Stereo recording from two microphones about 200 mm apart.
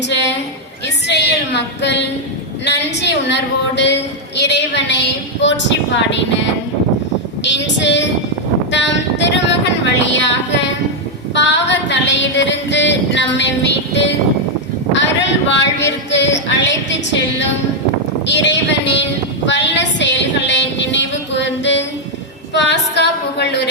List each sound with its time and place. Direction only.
0.1 s a sound: 60° left (ahead or behind)
2.6 s a woman's voice: 60° left (ahead or behind)
8.7 s a sound: 60° left (ahead or behind)
10.0 s a woman's voice: 60° left (ahead or behind)
11.3 s female singing: 60° left (ahead or behind)
14.9 s a woman's voice: 65° left (ahead or behind)